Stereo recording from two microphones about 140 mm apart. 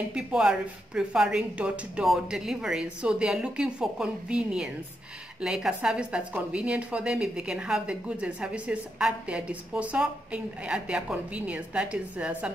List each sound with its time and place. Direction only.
0.1 s a woman's voice: 5° right (ahead or behind)